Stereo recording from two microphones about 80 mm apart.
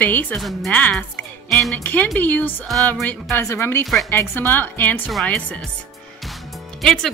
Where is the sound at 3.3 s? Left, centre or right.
Left.